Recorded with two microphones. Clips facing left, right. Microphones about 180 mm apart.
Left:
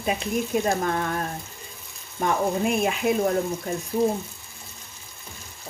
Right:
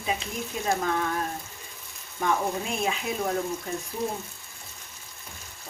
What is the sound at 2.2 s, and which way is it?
Speech, 55° left (ahead or behind).